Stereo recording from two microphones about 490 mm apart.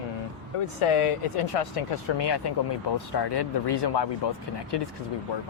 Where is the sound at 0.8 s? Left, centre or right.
Left.